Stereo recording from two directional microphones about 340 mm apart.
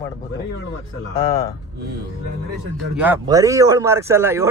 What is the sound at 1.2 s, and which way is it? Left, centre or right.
Speech, centre.